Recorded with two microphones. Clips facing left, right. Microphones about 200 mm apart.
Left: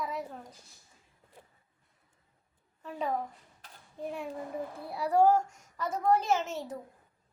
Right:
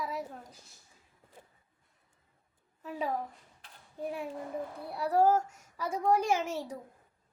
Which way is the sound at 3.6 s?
40° left (ahead or behind).